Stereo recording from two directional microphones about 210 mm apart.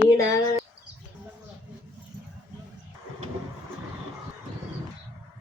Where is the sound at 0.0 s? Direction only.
15° left (ahead or behind).